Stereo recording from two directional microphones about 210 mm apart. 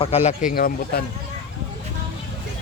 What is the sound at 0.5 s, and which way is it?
Speech, 45° left (ahead or behind).